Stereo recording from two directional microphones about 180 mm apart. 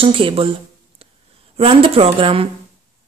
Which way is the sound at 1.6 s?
30° right (ahead or behind).